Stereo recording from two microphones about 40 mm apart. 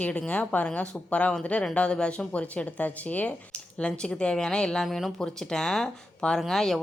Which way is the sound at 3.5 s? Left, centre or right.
Left.